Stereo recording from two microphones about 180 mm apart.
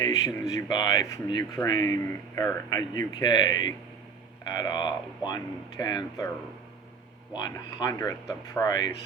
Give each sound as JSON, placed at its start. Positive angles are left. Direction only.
{"t": 0.0, "sound": "speech", "side_deg": 20}
{"t": 7.3, "sound": "speech", "side_deg": 20}